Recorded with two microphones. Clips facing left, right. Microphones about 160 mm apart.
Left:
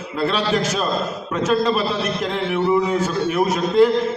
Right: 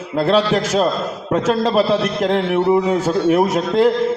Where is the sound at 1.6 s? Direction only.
65° right (ahead or behind).